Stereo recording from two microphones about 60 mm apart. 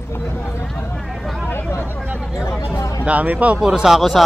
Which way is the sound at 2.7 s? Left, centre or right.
Left.